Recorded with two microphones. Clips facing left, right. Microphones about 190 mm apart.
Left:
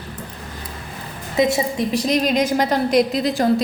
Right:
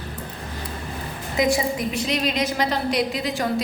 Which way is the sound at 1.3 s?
25° left (ahead or behind).